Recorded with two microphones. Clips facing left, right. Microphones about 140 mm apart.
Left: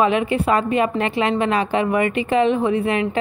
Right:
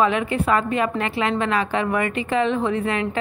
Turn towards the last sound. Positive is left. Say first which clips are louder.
# left 3 dB
turn(degrees=15)  # may be behind; listen again after turning